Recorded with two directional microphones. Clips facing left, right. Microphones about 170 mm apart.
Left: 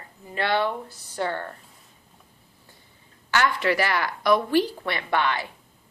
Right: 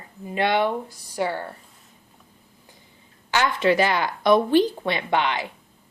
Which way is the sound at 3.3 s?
20° right (ahead or behind).